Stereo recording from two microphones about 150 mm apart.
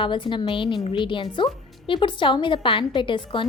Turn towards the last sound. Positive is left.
turn(degrees=35)  # may be behind; listen again after turning